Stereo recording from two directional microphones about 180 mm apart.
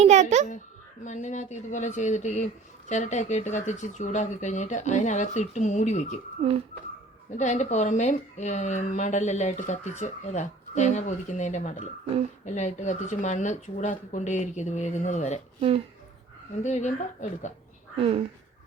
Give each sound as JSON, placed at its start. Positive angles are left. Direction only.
{"t": 0.0, "sound": "a child's voice", "side_deg": -40}
{"t": 1.0, "sound": "speech", "side_deg": 40}
{"t": 7.3, "sound": "speech", "side_deg": 40}
{"t": 16.6, "sound": "speech", "side_deg": 40}
{"t": 17.9, "sound": "speech", "side_deg": -30}